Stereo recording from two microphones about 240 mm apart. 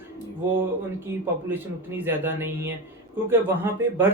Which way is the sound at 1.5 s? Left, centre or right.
Centre.